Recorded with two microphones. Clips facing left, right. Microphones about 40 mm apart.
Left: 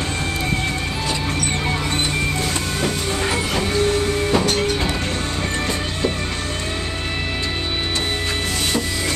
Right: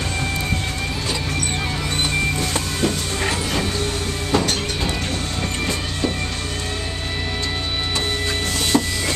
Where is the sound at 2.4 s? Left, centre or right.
Centre.